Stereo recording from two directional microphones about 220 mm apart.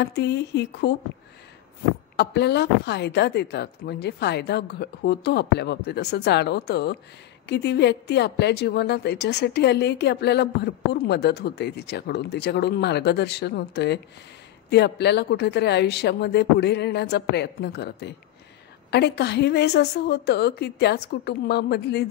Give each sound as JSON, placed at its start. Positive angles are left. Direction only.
{"t": 0.0, "sound": "a woman's voice", "side_deg": 50}
{"t": 2.1, "sound": "a woman's voice", "side_deg": 50}